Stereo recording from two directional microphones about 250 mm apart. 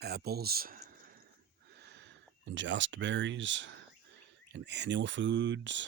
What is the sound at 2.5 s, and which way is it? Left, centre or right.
Speech, right.